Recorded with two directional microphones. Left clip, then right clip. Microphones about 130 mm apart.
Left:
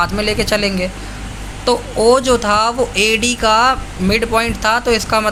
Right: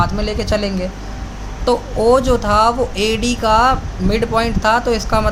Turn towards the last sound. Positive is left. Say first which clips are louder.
# left 2 dB
turn(degrees=10)  # may be behind; listen again after turning